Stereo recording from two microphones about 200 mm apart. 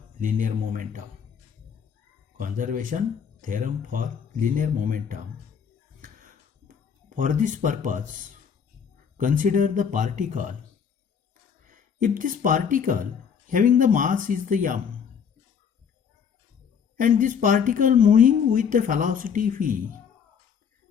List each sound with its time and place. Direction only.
0.2 s a woman's voice: 40° right (ahead or behind)
2.4 s speech: 40° right (ahead or behind)
6.7 s speech: 40° right (ahead or behind)
9.1 s a woman's voice: 40° right (ahead or behind)
11.7 s a woman's voice: 40° right (ahead or behind)
17.0 s a woman's voice: 40° right (ahead or behind)